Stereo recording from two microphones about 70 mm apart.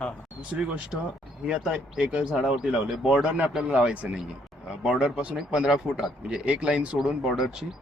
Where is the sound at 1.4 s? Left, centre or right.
Centre.